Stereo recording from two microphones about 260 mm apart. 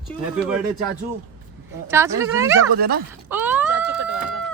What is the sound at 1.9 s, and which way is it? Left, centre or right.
Speech, centre.